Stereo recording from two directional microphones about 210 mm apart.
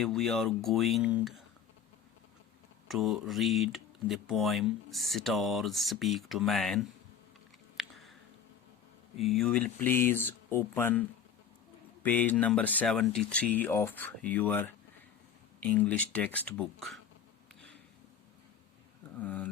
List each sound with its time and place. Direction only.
0.0 s speech: centre (ahead or behind)
2.8 s speech: centre (ahead or behind)
7.8 s chewing: centre (ahead or behind)
9.1 s speech: centre (ahead or behind)
12.0 s speech: 10° left (ahead or behind)
19.2 s speech: 5° left (ahead or behind)